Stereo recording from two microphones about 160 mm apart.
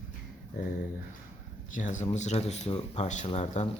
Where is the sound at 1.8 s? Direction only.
50° left (ahead or behind).